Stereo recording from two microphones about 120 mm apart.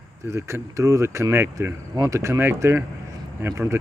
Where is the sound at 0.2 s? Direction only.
25° right (ahead or behind).